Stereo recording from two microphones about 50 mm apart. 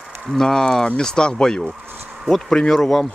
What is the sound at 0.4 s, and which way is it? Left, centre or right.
Speech, centre.